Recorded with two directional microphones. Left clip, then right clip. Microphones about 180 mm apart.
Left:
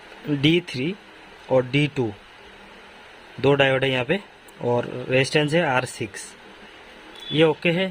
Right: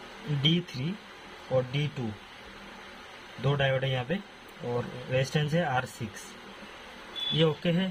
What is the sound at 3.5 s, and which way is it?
Speech, 65° left (ahead or behind).